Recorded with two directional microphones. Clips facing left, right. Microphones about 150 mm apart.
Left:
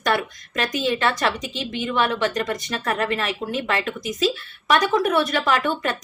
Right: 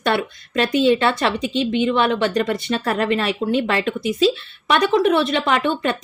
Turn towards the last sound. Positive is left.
turn(degrees=-30)  # may be behind; listen again after turning